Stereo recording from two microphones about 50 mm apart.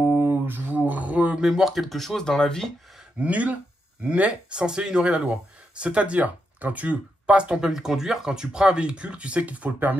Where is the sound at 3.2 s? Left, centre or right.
Right.